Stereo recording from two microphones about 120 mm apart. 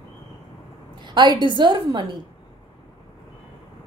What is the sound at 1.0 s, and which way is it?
A woman's voice, 40° right (ahead or behind).